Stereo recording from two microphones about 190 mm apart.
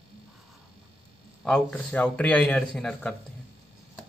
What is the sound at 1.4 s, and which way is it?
A man's voice, 5° left (ahead or behind).